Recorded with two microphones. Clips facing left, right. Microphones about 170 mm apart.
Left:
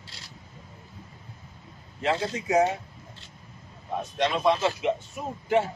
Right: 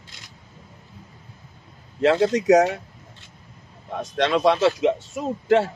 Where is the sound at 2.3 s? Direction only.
90° right.